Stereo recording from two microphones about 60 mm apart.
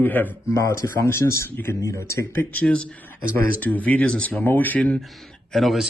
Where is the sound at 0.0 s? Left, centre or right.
Left.